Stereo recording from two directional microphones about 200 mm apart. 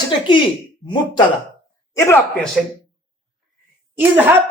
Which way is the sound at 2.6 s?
Centre (ahead or behind).